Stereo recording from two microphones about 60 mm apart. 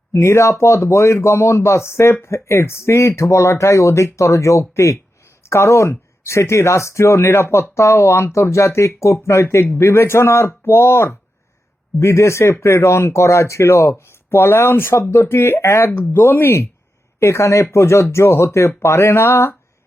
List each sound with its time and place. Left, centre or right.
0.1 s speech: left
17.2 s speech: left